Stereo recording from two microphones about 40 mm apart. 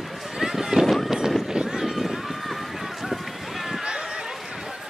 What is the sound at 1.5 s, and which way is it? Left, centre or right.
Run, centre.